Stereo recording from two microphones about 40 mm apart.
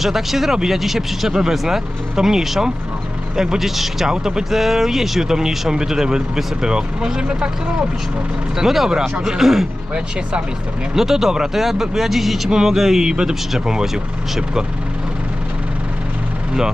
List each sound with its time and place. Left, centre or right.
0.0 s speech: centre; by 7.5 s right
8.5 s speech: centre
10.9 s speech: centre